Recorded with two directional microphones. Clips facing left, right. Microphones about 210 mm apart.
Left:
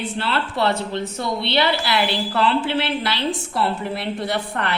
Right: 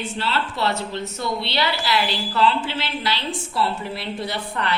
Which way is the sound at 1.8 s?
60° left (ahead or behind).